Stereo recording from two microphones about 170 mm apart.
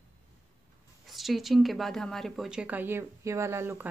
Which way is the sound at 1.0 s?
Centre (ahead or behind).